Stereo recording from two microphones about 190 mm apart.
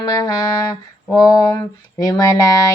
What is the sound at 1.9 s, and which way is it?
Speech, 20° left (ahead or behind).